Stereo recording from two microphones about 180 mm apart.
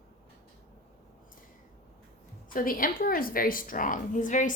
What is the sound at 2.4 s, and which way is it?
A woman's voice, 50° left (ahead or behind).